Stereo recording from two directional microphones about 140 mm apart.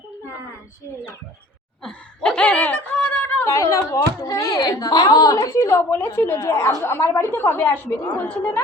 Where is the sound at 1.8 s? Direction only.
5° left (ahead or behind).